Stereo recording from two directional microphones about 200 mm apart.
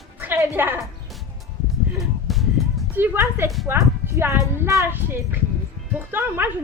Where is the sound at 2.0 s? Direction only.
Centre (ahead or behind).